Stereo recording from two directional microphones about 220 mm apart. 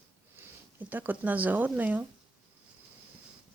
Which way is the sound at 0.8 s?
10° right (ahead or behind).